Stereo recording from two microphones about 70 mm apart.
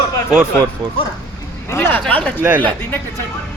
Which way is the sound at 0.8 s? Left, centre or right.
Right.